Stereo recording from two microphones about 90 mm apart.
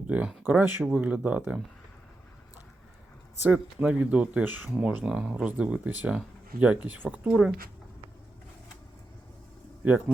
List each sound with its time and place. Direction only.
0.1 s speech: 15° right (ahead or behind)
3.4 s speech: 20° right (ahead or behind)